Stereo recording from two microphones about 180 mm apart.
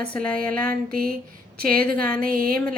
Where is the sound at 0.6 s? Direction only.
55° right (ahead or behind).